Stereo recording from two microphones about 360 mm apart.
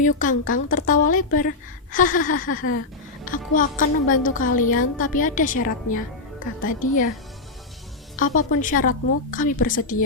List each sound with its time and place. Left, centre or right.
0.0 s a woman's voice: left
8.1 s a woman's voice: left